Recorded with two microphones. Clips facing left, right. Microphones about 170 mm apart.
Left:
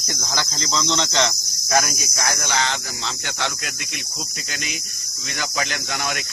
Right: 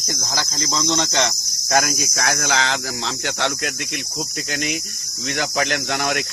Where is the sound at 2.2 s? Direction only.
85° right.